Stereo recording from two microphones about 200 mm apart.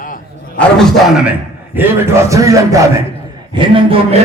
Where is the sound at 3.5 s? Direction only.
25° right (ahead or behind).